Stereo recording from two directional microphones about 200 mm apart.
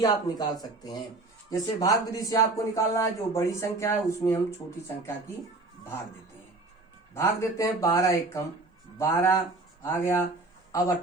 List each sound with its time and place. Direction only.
0.0 s speech: 20° left (ahead or behind)
7.1 s speech: 15° left (ahead or behind)